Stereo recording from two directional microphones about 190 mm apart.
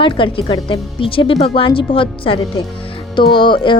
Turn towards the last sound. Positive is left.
turn(degrees=25)  # may be behind; listen again after turning